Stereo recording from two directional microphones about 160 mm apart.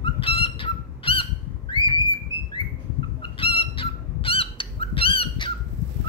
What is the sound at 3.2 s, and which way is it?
Fowl, 35° left (ahead or behind).